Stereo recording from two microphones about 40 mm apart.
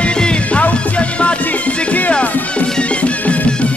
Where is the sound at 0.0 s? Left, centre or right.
Left.